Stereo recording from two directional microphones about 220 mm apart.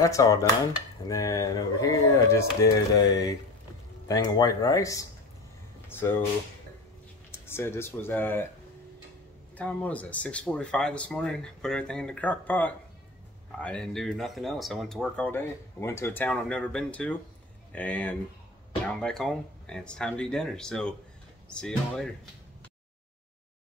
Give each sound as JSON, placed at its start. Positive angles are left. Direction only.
{"t": 0.0, "sound": "speech", "side_deg": 15}
{"t": 4.1, "sound": "speech", "side_deg": 15}
{"t": 7.2, "sound": "speech", "side_deg": 10}
{"t": 9.6, "sound": "speech", "side_deg": 5}